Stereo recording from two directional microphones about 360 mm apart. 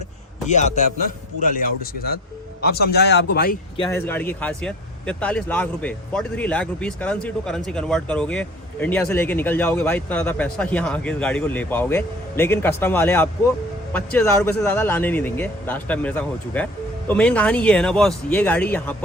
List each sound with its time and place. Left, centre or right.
0.4 s a man's voice: centre
3.8 s speech: centre